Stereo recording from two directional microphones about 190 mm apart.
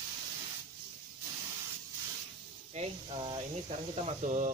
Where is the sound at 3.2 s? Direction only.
25° right (ahead or behind).